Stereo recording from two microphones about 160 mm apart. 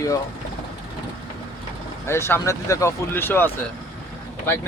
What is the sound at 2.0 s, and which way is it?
Speech, 15° left (ahead or behind).